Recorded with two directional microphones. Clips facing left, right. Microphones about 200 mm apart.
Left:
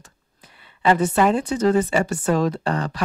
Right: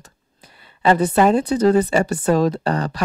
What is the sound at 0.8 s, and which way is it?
A woman's voice, 35° right (ahead or behind).